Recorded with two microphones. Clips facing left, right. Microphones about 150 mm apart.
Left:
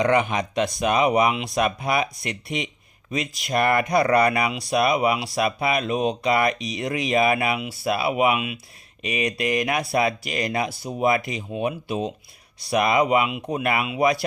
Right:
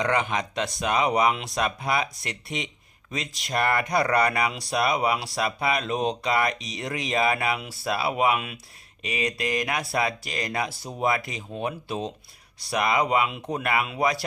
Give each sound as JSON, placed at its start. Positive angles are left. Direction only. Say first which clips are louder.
{"t": 0.0, "sound": "speech", "louder": "left 5 dB", "side_deg": 20}